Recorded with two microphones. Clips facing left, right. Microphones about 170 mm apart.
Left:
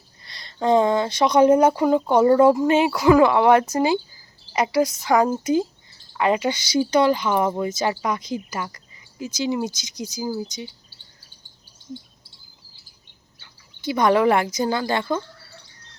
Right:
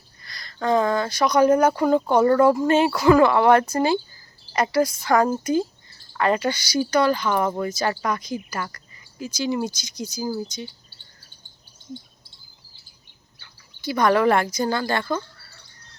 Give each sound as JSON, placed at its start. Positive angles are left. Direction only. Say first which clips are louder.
{"t": 0.3, "sound": "speech", "louder": "left 3 dB", "side_deg": 30}
{"t": 1.7, "sound": "a woman's voice", "louder": "left 1 dB", "side_deg": 15}
{"t": 10.2, "sound": "cricket", "louder": "even", "side_deg": 15}
{"t": 13.4, "sound": "speech", "louder": "left 2 dB", "side_deg": 20}